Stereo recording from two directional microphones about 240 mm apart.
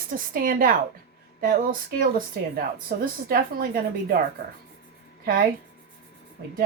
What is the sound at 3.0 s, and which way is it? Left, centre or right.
A woman's voice, right.